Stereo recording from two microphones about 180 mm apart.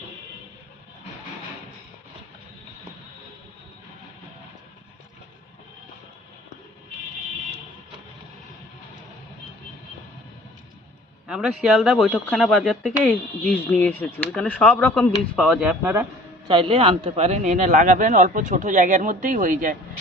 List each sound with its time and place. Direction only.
11.3 s speech: 5° right (ahead or behind)
13.1 s speech: 5° left (ahead or behind); by 16.0 s 10° right (ahead or behind)
16.5 s speech: 30° right (ahead or behind); by 19.7 s 50° right (ahead or behind)